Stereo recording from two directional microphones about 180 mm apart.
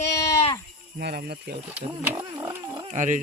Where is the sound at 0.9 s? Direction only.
60° right (ahead or behind).